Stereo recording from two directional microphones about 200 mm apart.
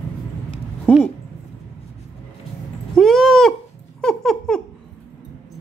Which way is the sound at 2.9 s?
Centre (ahead or behind).